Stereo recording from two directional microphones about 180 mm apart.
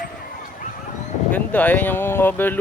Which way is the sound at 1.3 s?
10° left (ahead or behind).